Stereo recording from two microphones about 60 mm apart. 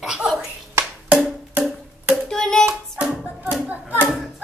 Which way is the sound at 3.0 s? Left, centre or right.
Centre.